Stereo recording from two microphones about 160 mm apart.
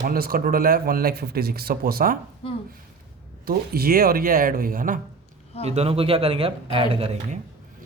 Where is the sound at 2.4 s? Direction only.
35° left (ahead or behind).